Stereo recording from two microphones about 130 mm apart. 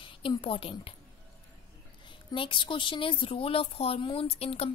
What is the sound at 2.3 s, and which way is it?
Speech, 40° left (ahead or behind).